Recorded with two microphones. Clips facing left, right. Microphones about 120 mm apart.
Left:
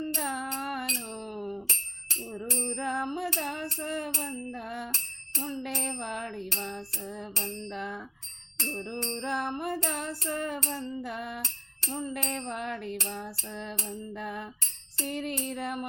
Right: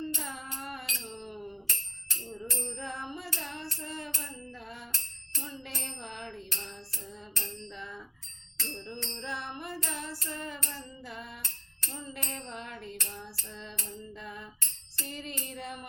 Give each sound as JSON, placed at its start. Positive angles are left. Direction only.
{"t": 0.0, "sound": "music", "side_deg": 60}
{"t": 2.4, "sound": "music", "side_deg": 60}
{"t": 5.4, "sound": "bicycle bell", "side_deg": 50}
{"t": 9.0, "sound": "music", "side_deg": 45}